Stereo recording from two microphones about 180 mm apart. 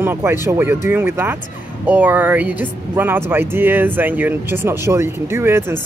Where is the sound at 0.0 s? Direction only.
10° right (ahead or behind).